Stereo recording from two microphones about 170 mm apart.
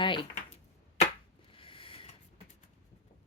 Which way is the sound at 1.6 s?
30° left (ahead or behind).